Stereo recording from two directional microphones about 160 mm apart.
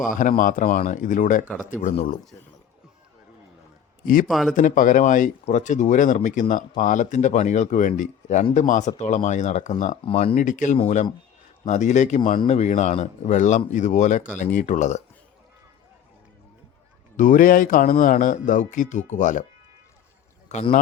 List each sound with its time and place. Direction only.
0.0 s a man's voice: 55° left (ahead or behind)
4.0 s a man's voice: 60° left (ahead or behind)
4.3 s speech: centre (ahead or behind)
4.5 s speech: 55° left (ahead or behind)
10.0 s speech: 35° left (ahead or behind)
10.3 s speech: 55° left (ahead or behind)
17.2 s speech: 55° left (ahead or behind)
20.5 s speech: 45° left (ahead or behind)